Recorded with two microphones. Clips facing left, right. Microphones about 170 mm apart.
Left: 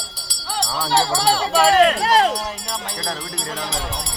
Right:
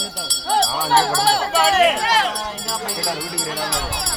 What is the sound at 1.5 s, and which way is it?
Speech, 5° right (ahead or behind).